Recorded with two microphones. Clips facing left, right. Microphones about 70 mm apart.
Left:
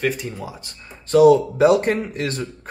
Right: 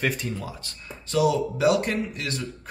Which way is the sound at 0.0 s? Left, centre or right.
Centre.